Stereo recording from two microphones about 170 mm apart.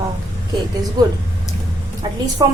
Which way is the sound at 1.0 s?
25° right (ahead or behind).